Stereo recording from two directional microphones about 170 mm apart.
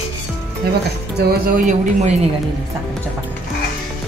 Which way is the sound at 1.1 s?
70° right (ahead or behind).